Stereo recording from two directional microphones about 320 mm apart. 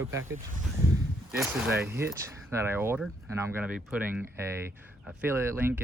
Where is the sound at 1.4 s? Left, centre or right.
Centre.